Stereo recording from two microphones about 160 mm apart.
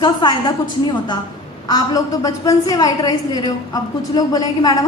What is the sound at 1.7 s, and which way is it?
A woman's voice, 20° left (ahead or behind).